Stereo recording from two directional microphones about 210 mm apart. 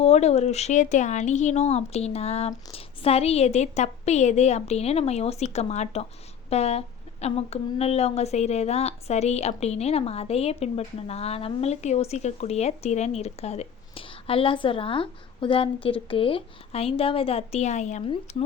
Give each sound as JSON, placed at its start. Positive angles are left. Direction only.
{"t": 0.0, "sound": "a woman's voice", "side_deg": 30}